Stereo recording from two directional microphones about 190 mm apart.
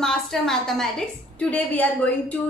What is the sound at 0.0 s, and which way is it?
A woman's voice, 5° left (ahead or behind).